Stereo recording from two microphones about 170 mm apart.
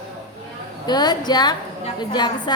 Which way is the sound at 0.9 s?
25° left (ahead or behind).